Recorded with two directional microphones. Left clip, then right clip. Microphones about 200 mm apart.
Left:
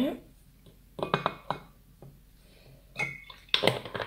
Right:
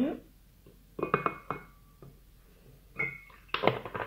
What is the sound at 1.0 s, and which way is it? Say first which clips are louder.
Chink: even; 40° left (ahead or behind).